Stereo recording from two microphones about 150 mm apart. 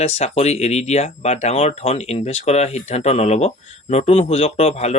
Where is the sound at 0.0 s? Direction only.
45° left (ahead or behind).